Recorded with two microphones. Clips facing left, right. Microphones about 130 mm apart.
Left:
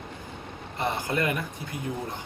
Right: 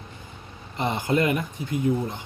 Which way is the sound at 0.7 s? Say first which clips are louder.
Right 4 dB; 20° right (ahead or behind).